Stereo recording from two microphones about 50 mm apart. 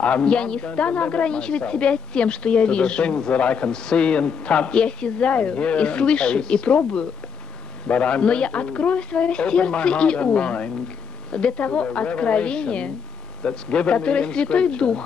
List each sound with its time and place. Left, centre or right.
0.0 s a woman's voice: left